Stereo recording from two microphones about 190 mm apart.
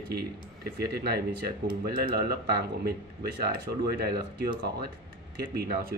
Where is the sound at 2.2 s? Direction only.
55° right (ahead or behind).